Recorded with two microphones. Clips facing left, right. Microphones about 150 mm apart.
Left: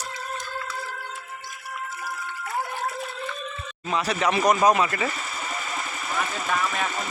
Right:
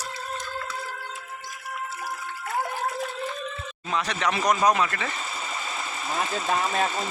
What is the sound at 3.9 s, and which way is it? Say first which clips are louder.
Speech: left 3 dB; 5° left (ahead or behind).